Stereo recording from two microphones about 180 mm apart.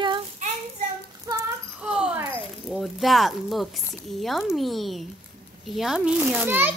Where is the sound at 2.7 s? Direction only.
Centre (ahead or behind).